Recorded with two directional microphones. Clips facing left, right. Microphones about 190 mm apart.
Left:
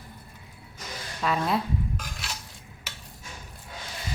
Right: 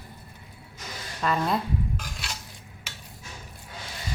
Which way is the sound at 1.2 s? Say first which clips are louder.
Even; 5° left (ahead or behind).